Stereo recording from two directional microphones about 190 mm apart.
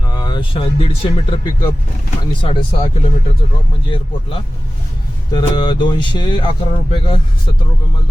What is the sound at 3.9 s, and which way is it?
Speech, 30° left (ahead or behind).